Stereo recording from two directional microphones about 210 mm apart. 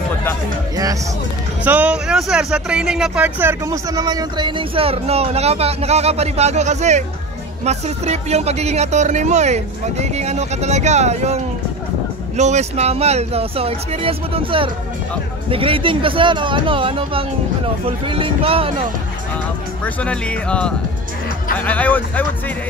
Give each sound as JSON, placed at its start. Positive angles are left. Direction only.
{"t": 1.6, "sound": "speech", "side_deg": -5}
{"t": 19.8, "sound": "speech", "side_deg": 5}